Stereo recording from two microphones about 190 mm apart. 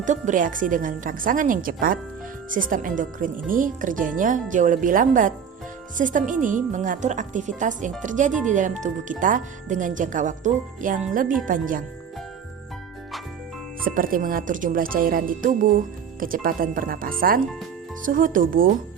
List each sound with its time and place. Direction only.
0.0 s speech: 40° right (ahead or behind)
13.8 s speech: 45° right (ahead or behind)